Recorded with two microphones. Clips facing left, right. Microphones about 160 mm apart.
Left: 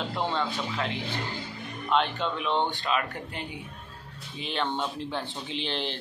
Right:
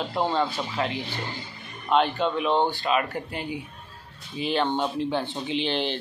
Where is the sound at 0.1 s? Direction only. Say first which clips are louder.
Right 6 dB; 35° right (ahead or behind).